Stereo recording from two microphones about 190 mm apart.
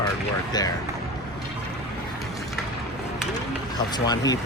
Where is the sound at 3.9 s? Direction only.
20° left (ahead or behind).